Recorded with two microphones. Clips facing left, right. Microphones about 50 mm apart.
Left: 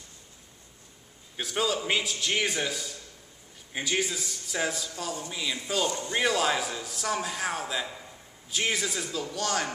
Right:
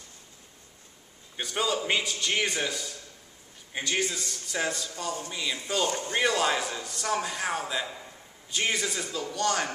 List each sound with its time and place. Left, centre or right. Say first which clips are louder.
1.3 s a man's voice: even; centre
5.9 s speech: even; right
6.1 s a man's voice: even; centre